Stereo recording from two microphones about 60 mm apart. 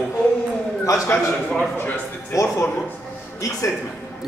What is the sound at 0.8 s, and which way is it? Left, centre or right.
Speech, left.